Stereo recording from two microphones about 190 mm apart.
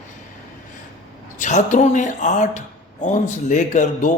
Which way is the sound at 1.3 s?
40° left (ahead or behind).